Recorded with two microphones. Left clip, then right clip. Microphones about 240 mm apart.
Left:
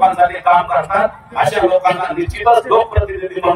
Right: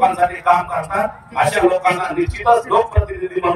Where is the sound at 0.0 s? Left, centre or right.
Left.